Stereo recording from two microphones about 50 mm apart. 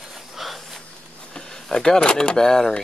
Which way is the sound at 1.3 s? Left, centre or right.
Centre.